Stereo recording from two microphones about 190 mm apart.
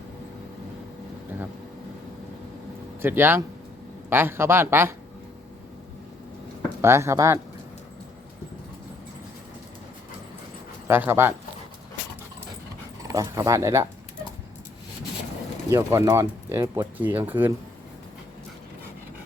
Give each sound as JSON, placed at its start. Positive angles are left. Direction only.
{"t": 3.0, "sound": "speech", "side_deg": -10}
{"t": 6.8, "sound": "speech", "side_deg": -15}
{"t": 10.8, "sound": "speech", "side_deg": -10}
{"t": 13.1, "sound": "speech", "side_deg": -15}
{"t": 15.7, "sound": "speech", "side_deg": -15}